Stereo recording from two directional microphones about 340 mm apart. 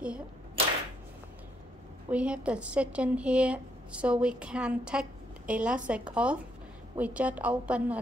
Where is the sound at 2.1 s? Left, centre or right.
Centre.